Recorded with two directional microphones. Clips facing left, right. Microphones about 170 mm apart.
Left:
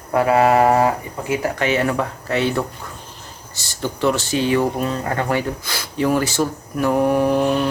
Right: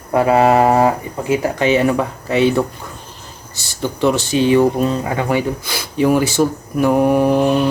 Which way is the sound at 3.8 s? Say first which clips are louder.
Right 3 dB; 15° right (ahead or behind).